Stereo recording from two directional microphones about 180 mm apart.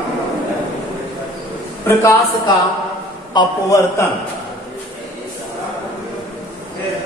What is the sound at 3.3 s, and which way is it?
Speech, 20° left (ahead or behind).